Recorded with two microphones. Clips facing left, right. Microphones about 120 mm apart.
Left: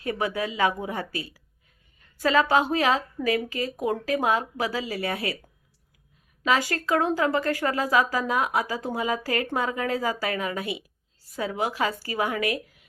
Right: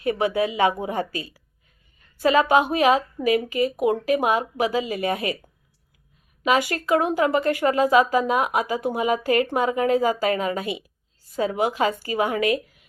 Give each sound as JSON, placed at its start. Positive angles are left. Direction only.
{"t": 0.0, "sound": "a woman's voice", "side_deg": -20}
{"t": 6.4, "sound": "a woman's voice", "side_deg": -15}